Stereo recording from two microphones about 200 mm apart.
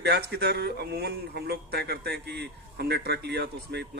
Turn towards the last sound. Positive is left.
turn(degrees=-55)  # may be behind; listen again after turning